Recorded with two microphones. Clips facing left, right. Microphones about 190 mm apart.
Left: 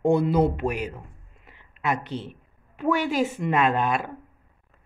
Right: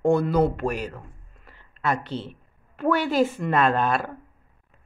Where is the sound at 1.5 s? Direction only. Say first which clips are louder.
Right 1 dB; 15° left (ahead or behind).